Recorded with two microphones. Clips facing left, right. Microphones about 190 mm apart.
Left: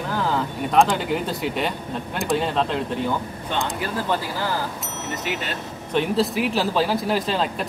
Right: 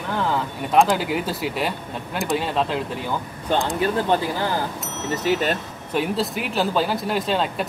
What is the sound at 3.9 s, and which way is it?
Speech, 25° right (ahead or behind).